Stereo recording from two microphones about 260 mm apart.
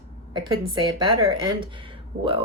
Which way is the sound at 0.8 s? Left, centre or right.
Centre.